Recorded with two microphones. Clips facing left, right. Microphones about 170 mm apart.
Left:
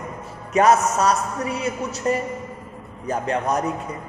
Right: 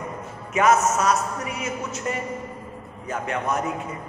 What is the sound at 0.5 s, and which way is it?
A man's voice, 35° left (ahead or behind).